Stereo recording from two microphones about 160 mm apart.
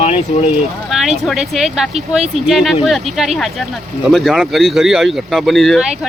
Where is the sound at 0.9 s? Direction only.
Centre (ahead or behind).